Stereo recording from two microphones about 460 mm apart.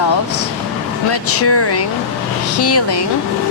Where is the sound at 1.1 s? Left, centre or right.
Left.